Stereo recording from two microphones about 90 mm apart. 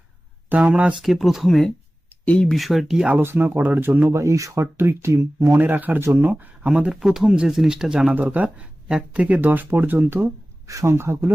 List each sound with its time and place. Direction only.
0.5 s speech: 15° right (ahead or behind)
1.0 s speech: centre (ahead or behind)
2.6 s speech: centre (ahead or behind)
3.2 s speech: 25° right (ahead or behind)
4.1 s speech: 35° right (ahead or behind)
5.5 s speech: 20° right (ahead or behind)
8.1 s speech: 20° right (ahead or behind)
10.7 s speech: 35° right (ahead or behind)